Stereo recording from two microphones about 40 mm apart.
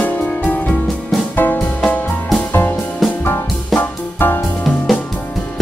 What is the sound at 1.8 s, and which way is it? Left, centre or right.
Music, left.